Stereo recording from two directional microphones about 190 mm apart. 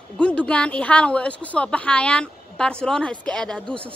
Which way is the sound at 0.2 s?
5° left (ahead or behind).